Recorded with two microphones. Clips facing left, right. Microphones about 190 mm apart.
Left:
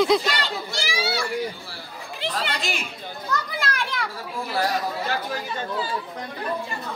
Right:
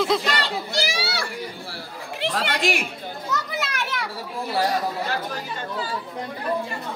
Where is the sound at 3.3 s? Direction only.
5° right (ahead or behind).